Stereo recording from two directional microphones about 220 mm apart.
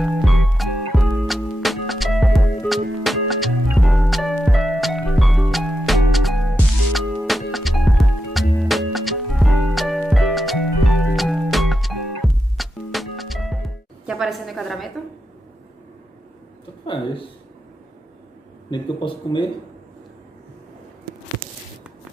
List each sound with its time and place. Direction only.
0.0 s music: centre (ahead or behind)
16.8 s speech: 20° left (ahead or behind)
18.7 s a man's voice: 20° left (ahead or behind)